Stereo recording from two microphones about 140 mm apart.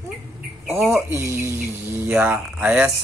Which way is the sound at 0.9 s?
20° right (ahead or behind).